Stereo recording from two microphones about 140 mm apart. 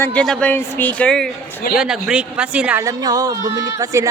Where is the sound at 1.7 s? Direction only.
5° right (ahead or behind).